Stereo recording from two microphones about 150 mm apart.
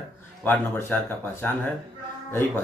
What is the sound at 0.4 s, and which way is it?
Speech, 15° left (ahead or behind).